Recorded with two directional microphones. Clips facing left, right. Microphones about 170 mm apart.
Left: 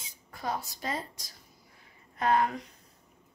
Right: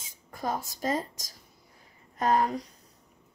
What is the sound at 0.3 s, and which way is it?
Speech, 45° right (ahead or behind).